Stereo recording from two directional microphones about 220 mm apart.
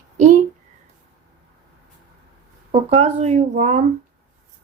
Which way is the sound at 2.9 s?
30° right (ahead or behind).